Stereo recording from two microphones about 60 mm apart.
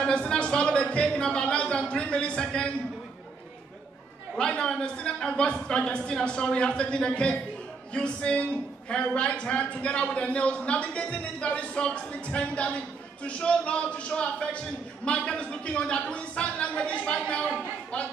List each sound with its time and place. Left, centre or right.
0.0 s speech: centre
4.4 s a woman's voice: centre